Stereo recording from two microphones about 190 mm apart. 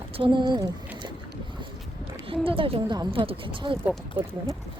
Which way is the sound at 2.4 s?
30° right (ahead or behind).